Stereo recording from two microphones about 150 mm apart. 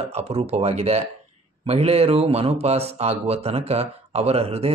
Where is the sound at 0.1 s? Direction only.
45° right (ahead or behind).